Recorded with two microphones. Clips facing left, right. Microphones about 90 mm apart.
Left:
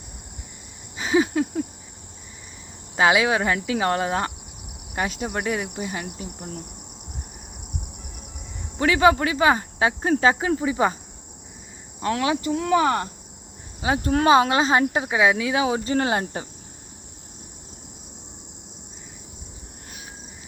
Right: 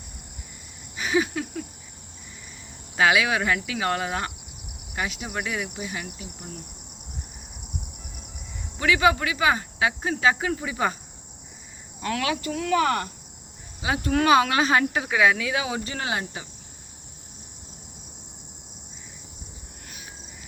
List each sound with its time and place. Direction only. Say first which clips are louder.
0.9 s a sound: left 4 dB; 25° left (ahead or behind)
2.9 s speech: left 2 dB; 30° left (ahead or behind)
8.8 s speech: left 3 dB; 35° left (ahead or behind)
11.9 s speech: left 4 dB; 30° left (ahead or behind)